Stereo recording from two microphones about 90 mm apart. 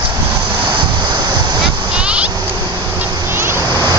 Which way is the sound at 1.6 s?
10° right (ahead or behind).